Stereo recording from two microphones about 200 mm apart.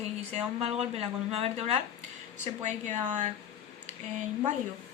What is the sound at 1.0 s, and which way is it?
Speech, 30° right (ahead or behind).